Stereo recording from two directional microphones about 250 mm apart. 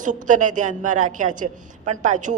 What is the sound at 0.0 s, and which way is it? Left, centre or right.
A woman's voice, right.